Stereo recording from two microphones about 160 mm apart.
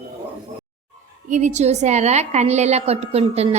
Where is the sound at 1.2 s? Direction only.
50° right (ahead or behind).